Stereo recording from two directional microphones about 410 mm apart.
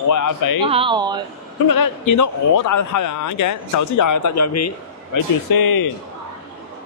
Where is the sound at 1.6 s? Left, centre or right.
Left.